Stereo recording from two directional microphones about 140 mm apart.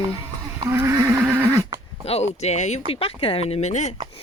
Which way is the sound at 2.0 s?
50° left (ahead or behind).